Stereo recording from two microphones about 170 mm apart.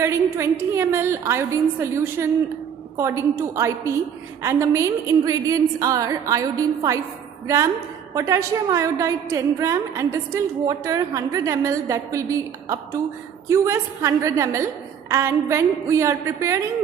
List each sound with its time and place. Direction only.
0.0 s a woman's voice: 15° right (ahead or behind)